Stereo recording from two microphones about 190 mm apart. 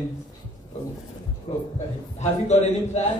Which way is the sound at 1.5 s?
20° left (ahead or behind).